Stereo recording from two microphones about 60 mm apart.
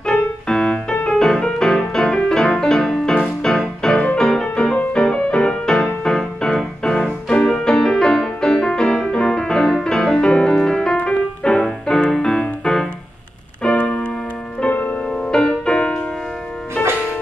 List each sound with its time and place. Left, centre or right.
0.0 s music: centre
13.6 s keyboard: centre
14.7 s music: left
15.0 s music: centre